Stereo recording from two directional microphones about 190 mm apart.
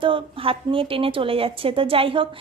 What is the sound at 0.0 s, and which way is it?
Speech, 25° right (ahead or behind).